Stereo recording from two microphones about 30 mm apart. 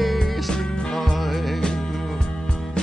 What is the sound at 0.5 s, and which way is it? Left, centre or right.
Music, left.